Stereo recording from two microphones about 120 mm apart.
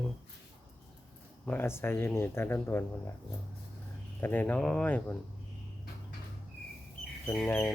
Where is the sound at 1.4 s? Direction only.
20° left (ahead or behind).